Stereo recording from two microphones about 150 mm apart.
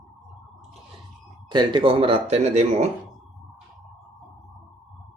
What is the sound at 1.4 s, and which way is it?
Speech, 30° right (ahead or behind).